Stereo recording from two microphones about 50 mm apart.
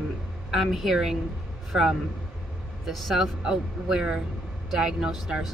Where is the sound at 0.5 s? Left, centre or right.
Centre.